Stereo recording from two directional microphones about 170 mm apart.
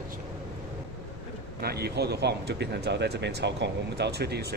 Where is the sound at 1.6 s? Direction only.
70° right (ahead or behind).